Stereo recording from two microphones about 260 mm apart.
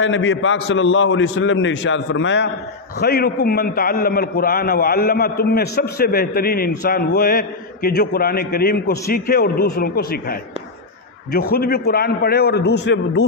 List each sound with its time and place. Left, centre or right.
0.0 s a man's voice: left
11.3 s a man's voice: left